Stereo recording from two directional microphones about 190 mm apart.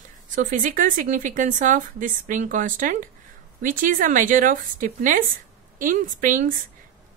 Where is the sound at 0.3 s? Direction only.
45° right (ahead or behind).